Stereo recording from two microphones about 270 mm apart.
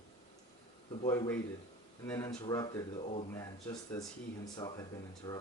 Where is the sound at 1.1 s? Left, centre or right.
Centre.